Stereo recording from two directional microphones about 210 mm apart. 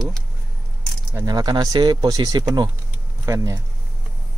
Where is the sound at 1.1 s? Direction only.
15° right (ahead or behind).